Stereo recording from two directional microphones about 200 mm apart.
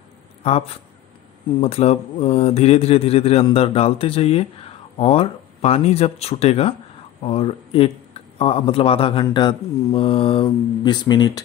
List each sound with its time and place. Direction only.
0.4 s speech: 30° left (ahead or behind)